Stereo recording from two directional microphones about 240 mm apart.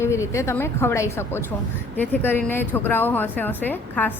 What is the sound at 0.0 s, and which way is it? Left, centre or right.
A woman's voice, centre.